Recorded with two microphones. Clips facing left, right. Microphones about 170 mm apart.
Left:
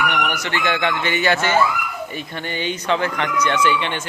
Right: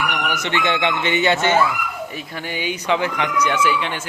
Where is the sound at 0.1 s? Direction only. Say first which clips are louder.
Left 1 dB; centre (ahead or behind).